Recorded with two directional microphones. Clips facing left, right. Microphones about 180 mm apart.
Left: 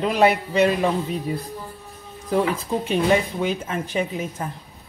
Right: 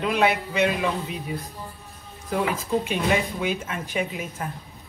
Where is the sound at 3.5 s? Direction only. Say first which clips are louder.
Left 3 dB; 30° left (ahead or behind).